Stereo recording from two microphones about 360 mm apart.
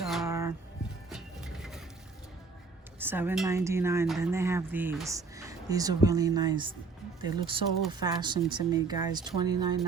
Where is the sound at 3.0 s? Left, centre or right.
Centre.